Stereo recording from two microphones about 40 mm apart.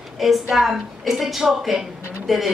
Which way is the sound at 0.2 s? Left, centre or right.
Centre.